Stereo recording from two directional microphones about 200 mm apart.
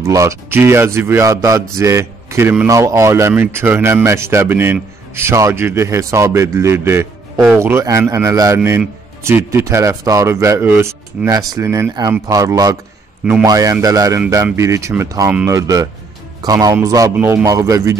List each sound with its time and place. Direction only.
0.0 s a man's voice: 15° right (ahead or behind)